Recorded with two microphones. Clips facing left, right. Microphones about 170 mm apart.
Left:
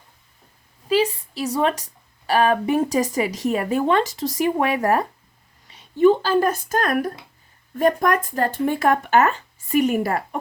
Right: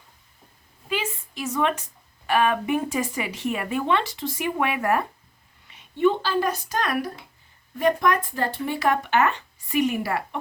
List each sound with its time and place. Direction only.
0.9 s speech: 35° left (ahead or behind)
5.6 s a sound: 35° left (ahead or behind)
6.0 s speech: 40° left (ahead or behind)